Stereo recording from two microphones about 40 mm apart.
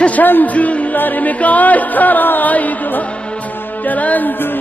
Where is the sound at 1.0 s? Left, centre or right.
Left.